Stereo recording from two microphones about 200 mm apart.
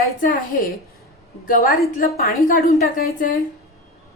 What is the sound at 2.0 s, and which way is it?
A woman's voice, 45° left (ahead or behind).